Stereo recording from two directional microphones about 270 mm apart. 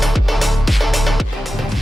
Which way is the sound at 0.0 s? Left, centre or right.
Centre.